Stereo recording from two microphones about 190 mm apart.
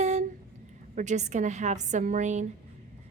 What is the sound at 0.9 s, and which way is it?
A woman's voice, 40° right (ahead or behind).